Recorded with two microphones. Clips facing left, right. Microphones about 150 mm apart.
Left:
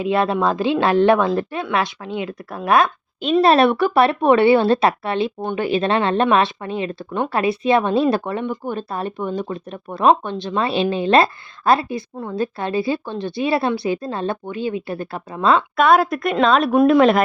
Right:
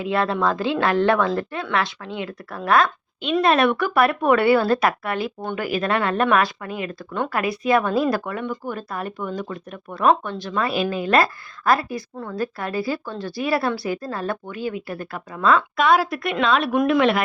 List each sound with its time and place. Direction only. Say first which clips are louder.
0.0 s speech: left 3 dB; 20° left (ahead or behind)
3.3 s speech: left 4 dB; 30° left (ahead or behind)
15.8 s a woman's voice: left 4 dB; 50° left (ahead or behind); by 17.2 s 35° left (ahead or behind)